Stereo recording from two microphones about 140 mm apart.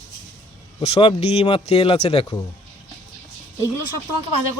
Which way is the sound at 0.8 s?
50° left (ahead or behind).